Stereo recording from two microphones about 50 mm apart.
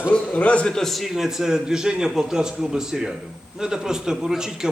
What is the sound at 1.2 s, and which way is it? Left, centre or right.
A man's voice, centre.